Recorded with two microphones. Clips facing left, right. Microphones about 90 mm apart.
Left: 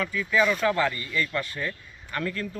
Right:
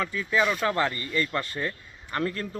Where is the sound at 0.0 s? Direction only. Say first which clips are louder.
Left 1 dB; 30° right (ahead or behind).